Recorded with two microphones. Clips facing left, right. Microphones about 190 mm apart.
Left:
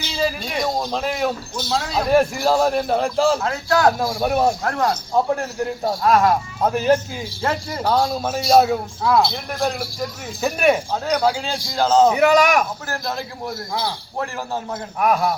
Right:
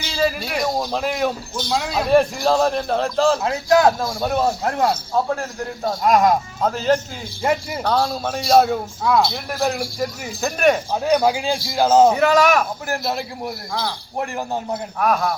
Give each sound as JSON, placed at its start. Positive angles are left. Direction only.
{"t": 0.2, "sound": "a man's voice", "side_deg": -5}
{"t": 3.4, "sound": "a man's voice", "side_deg": -20}
{"t": 4.2, "sound": "a man's voice", "side_deg": 15}
{"t": 4.6, "sound": "speech", "side_deg": -20}
{"t": 5.1, "sound": "a man's voice", "side_deg": 15}
{"t": 6.0, "sound": "a man's voice", "side_deg": -15}
{"t": 6.6, "sound": "a man's voice", "side_deg": 15}
{"t": 10.4, "sound": "a man's voice", "side_deg": 10}
{"t": 10.9, "sound": "a man's voice", "side_deg": -15}
{"t": 12.1, "sound": "a man's voice", "side_deg": 15}
{"t": 12.9, "sound": "a man's voice", "side_deg": -15}
{"t": 14.9, "sound": "a man's voice", "side_deg": 15}